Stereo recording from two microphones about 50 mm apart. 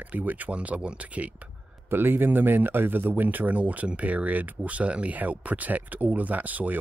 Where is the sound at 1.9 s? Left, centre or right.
Right.